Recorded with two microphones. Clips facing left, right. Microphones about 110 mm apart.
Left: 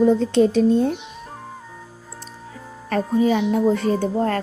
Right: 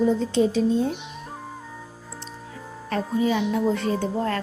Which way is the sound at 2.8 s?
45° left (ahead or behind).